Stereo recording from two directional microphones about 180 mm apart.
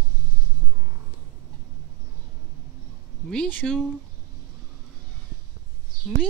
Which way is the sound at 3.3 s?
5° left (ahead or behind).